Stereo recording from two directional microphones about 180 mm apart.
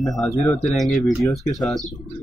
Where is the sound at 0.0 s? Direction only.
Centre (ahead or behind).